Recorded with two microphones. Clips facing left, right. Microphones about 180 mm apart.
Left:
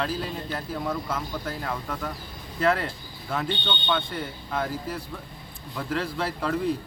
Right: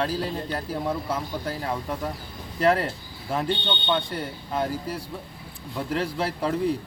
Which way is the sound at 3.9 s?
35° right (ahead or behind).